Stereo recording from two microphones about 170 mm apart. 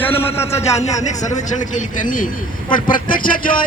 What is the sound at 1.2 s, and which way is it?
A man's voice, 45° left (ahead or behind).